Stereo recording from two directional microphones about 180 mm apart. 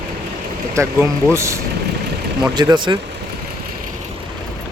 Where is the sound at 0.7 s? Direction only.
15° right (ahead or behind).